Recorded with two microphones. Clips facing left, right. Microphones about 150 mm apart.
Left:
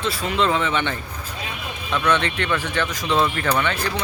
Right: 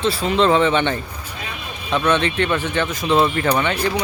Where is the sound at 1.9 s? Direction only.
20° right (ahead or behind).